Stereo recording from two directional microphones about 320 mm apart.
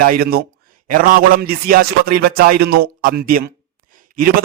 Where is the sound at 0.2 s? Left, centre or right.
Right.